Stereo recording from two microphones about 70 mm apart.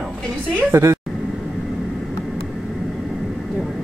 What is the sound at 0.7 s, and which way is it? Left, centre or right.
Speech, right.